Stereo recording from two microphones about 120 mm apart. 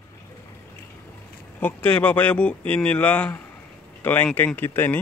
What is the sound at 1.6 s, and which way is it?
Speech, 15° left (ahead or behind).